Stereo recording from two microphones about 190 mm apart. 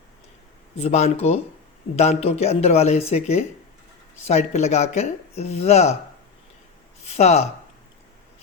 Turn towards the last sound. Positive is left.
turn(degrees=35)  # may be behind; listen again after turning